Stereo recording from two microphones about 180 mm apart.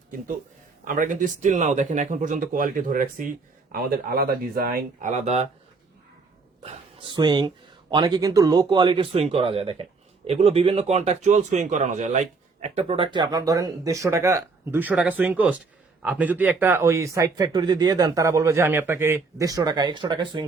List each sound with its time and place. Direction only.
0.9 s speech: 45° right (ahead or behind)
6.6 s a man's voice: 35° right (ahead or behind)